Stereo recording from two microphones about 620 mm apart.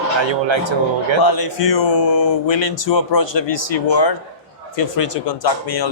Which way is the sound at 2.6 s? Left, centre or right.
Left.